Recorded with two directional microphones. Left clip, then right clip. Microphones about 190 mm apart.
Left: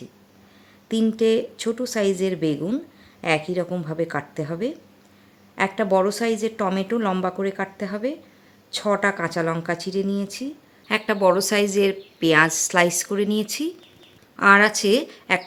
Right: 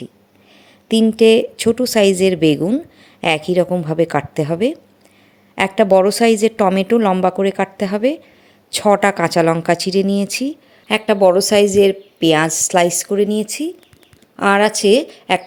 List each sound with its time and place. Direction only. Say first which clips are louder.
0.9 s a woman's voice: right 9 dB; 25° right (ahead or behind)